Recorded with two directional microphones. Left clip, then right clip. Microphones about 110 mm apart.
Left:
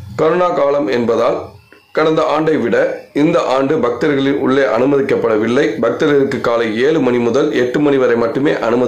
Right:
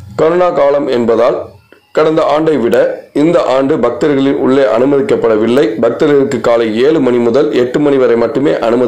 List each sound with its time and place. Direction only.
0.3 s a man's voice: 30° right (ahead or behind)